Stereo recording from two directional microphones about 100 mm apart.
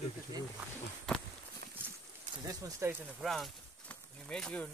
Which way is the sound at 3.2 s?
Centre (ahead or behind).